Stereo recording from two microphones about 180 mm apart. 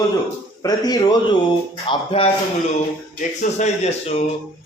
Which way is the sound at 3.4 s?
40° left (ahead or behind).